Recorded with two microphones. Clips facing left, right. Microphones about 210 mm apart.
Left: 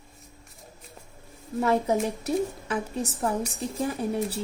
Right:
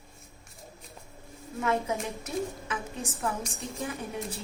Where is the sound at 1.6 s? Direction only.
40° left (ahead or behind).